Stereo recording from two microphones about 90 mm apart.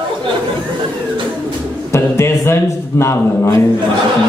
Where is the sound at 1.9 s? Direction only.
30° left (ahead or behind).